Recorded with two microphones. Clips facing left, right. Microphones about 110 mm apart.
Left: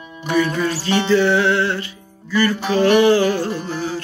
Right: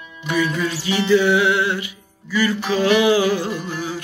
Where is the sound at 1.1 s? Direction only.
10° right (ahead or behind).